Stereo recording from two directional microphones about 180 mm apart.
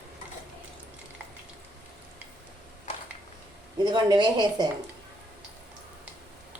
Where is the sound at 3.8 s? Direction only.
25° right (ahead or behind).